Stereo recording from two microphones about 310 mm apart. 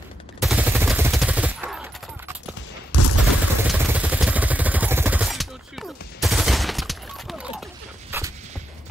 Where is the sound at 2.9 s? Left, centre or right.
Left.